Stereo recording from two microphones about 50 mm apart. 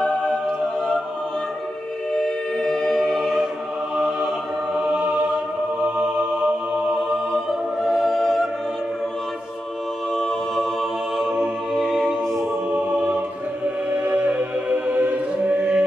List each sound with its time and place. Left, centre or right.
2.1 s music: centre
3.0 s choir: centre
3.9 s a sound: centre
4.8 s music: right
7.8 s music: centre
10.1 s a capella: centre
11.1 s a capella: centre
12.7 s choir: right
14.0 s music: right